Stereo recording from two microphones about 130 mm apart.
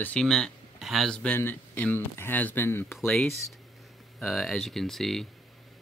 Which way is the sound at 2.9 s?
Centre (ahead or behind).